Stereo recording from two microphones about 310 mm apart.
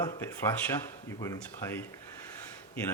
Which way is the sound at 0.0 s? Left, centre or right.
Centre.